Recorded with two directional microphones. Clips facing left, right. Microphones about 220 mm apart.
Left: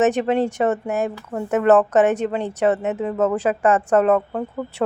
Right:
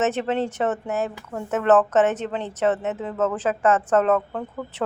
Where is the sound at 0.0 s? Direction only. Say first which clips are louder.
Left 5 dB; 15° left (ahead or behind).